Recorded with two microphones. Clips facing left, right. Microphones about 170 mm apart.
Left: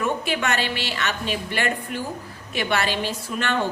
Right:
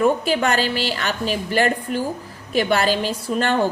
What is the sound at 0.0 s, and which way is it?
A woman's voice, 35° right (ahead or behind).